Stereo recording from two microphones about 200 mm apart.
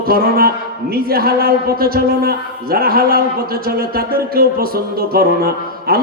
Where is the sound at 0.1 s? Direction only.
50° right (ahead or behind).